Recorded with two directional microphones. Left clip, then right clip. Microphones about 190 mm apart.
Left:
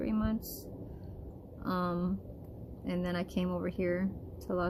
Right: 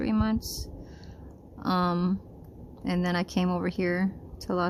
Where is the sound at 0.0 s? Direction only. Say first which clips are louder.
Right 6 dB; 50° right (ahead or behind).